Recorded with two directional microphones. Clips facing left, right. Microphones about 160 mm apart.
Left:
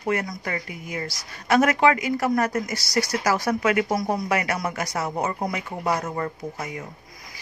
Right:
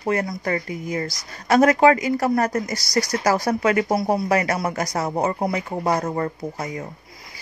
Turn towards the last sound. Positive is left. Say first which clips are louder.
# right 3 dB
turn(degrees=-35)  # may be behind; listen again after turning